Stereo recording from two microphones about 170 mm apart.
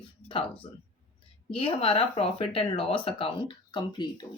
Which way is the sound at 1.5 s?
30° left (ahead or behind).